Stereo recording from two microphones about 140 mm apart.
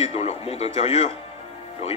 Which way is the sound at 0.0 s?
45° left (ahead or behind).